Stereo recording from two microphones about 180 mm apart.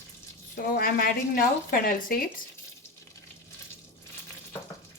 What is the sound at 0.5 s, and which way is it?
A woman's voice, 50° left (ahead or behind).